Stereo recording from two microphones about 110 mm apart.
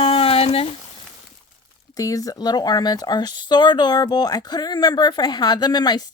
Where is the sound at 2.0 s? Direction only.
30° left (ahead or behind).